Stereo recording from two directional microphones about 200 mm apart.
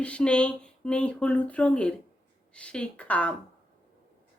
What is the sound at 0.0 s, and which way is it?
A woman's voice, 5° left (ahead or behind).